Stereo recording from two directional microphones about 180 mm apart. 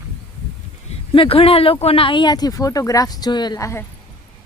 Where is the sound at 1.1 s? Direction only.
30° left (ahead or behind).